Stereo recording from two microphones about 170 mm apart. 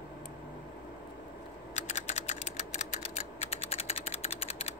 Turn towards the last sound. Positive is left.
turn(degrees=40)  # may be behind; listen again after turning